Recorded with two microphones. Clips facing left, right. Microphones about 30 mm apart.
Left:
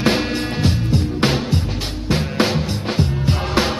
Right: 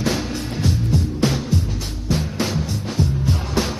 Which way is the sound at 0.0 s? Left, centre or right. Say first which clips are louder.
Left 5 dB; left.